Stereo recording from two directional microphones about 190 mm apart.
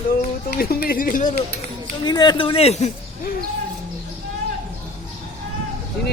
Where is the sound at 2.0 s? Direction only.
20° left (ahead or behind).